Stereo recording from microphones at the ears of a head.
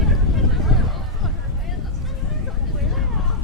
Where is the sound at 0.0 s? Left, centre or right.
Left.